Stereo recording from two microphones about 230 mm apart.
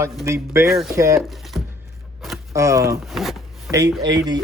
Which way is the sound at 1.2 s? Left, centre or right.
Centre.